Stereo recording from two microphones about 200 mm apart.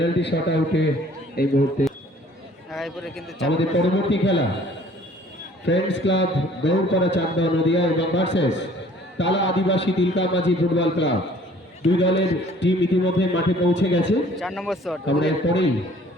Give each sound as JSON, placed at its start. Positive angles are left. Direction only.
{"t": 0.0, "sound": "a man's voice", "side_deg": 60}
{"t": 1.4, "sound": "a man's voice", "side_deg": 50}
{"t": 2.7, "sound": "a man's voice", "side_deg": 0}
{"t": 3.5, "sound": "a man's voice", "side_deg": 65}
{"t": 5.6, "sound": "a man's voice", "side_deg": 65}
{"t": 14.3, "sound": "speech", "side_deg": 0}
{"t": 15.0, "sound": "a man's voice", "side_deg": 65}